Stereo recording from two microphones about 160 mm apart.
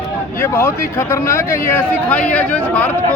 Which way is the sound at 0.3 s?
15° left (ahead or behind).